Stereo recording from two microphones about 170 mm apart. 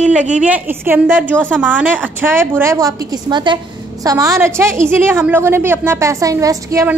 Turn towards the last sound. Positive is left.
turn(degrees=-20)  # may be behind; listen again after turning